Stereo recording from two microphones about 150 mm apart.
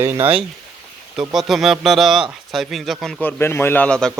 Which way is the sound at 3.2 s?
15° left (ahead or behind).